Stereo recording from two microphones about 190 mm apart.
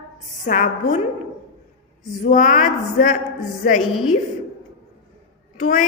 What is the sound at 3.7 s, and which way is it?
Speech, centre (ahead or behind).